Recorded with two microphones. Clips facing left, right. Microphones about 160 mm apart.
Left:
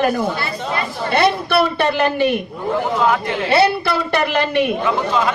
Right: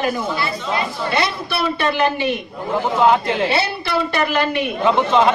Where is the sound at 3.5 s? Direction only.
55° left (ahead or behind).